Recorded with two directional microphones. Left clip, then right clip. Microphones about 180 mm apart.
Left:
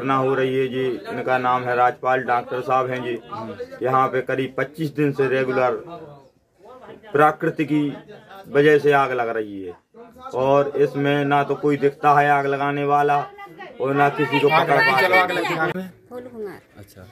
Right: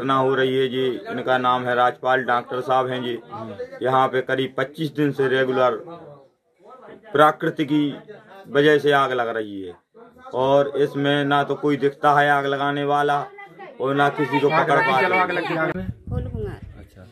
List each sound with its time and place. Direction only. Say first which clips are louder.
0.0 s speech: right 1 dB; centre (ahead or behind)
7.1 s speech: right 1 dB; centre (ahead or behind)
14.8 s speech: left 2 dB; 15° right (ahead or behind)
15.8 s speech: even; 5° left (ahead or behind)